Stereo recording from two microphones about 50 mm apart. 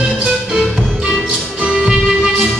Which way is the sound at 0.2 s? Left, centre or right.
Centre.